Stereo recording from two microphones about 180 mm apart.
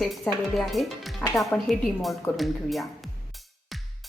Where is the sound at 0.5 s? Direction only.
Centre (ahead or behind).